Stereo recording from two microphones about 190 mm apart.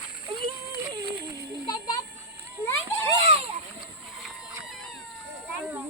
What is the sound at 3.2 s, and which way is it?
Splash, 30° right (ahead or behind).